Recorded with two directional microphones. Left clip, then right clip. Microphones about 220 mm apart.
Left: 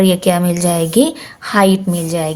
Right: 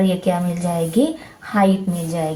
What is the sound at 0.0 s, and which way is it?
A woman's voice, 45° left (ahead or behind).